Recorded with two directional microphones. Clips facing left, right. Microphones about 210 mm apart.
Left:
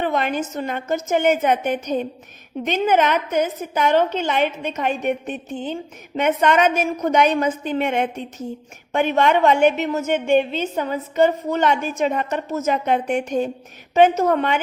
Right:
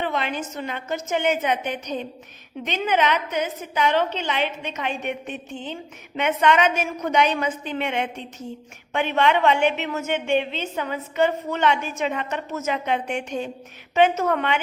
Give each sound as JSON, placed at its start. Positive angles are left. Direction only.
{"t": 0.0, "sound": "a woman's voice", "side_deg": 45}